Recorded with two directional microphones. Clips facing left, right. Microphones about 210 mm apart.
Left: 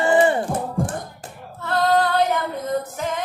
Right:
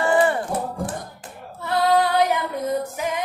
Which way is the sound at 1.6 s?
10° right (ahead or behind).